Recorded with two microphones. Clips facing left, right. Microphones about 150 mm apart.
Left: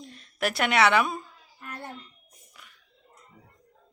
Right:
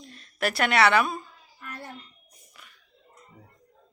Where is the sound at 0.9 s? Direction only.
15° left (ahead or behind).